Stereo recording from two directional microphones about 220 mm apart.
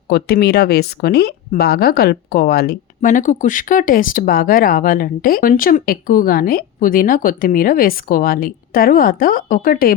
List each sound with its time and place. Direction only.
0.1 s speech: 45° left (ahead or behind)